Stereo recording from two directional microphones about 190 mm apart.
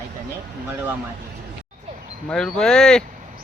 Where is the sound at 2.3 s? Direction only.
5° left (ahead or behind).